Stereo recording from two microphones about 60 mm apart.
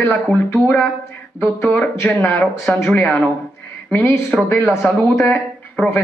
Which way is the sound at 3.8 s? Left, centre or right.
Left.